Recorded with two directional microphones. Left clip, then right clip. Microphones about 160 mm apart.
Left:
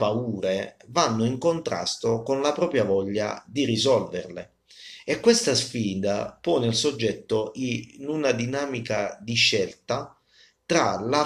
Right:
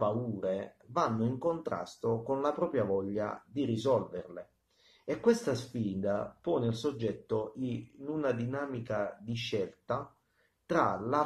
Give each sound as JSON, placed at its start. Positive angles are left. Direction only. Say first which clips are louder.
{"t": 0.0, "sound": "speech", "louder": "left 7 dB", "side_deg": 5}
{"t": 4.2, "sound": "speech", "louder": "left 9 dB", "side_deg": 15}
{"t": 5.1, "sound": "speech", "louder": "left 9 dB", "side_deg": 5}